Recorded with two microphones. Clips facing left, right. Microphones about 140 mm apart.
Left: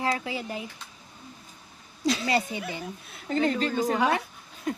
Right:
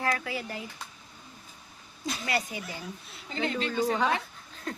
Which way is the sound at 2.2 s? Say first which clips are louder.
Left 5 dB; 25° left (ahead or behind).